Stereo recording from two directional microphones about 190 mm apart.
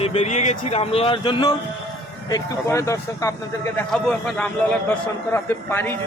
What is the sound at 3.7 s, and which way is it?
A man's voice, 5° left (ahead or behind).